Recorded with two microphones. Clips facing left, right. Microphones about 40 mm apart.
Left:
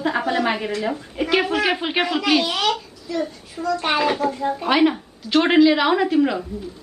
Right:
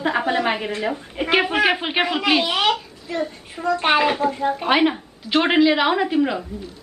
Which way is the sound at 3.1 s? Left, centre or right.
Right.